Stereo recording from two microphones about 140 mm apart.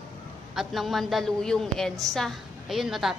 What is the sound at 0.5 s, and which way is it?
A woman's voice, centre (ahead or behind).